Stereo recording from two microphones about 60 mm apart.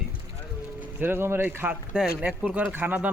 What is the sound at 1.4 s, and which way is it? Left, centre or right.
Speech, right.